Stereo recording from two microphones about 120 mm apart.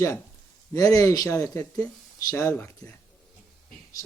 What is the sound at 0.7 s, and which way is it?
Speech, 30° left (ahead or behind).